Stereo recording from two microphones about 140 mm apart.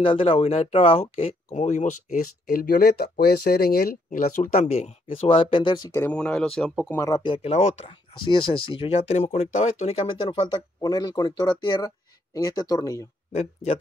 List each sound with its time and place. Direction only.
0.0 s speech: 40° left (ahead or behind)
1.5 s speech: 60° left (ahead or behind); by 4.5 s 80° left
4.6 s speech: 50° left (ahead or behind)
5.9 s speech: 10° left (ahead or behind)
7.0 s speech: 25° left (ahead or behind)
7.2 s speech: 40° left (ahead or behind)
7.5 s speech: 55° left (ahead or behind)
7.8 s speech: 35° left (ahead or behind)